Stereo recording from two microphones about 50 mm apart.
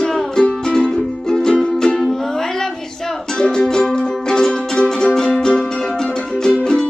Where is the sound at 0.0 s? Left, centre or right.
Centre.